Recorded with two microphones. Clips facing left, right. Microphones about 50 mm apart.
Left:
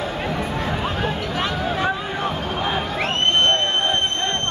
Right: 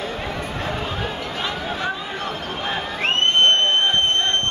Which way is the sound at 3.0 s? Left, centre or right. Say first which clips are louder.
Right 3 dB; right.